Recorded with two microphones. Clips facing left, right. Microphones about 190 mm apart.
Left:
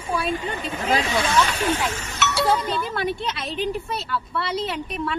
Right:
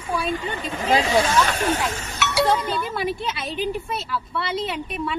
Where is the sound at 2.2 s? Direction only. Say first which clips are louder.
Right 2 dB; 10° right (ahead or behind).